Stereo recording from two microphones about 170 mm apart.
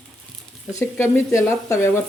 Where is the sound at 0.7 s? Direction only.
15° left (ahead or behind).